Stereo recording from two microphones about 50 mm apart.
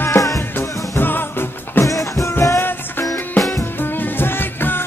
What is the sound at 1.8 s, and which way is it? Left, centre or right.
Music, left.